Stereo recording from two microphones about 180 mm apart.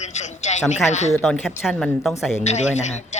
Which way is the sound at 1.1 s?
Centre (ahead or behind).